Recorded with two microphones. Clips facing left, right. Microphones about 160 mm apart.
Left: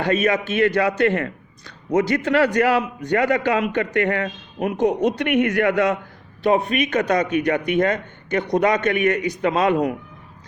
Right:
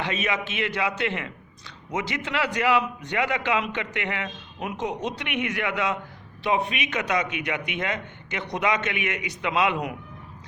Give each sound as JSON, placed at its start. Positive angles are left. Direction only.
{"t": 0.0, "sound": "a man's voice", "side_deg": 45}